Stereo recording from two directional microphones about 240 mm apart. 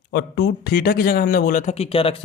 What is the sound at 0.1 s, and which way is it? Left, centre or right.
Speech, left.